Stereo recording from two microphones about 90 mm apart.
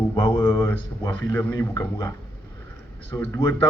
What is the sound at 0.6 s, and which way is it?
A man's voice, 30° left (ahead or behind).